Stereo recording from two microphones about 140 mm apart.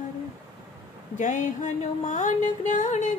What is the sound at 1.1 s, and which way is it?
Music, 65° left (ahead or behind).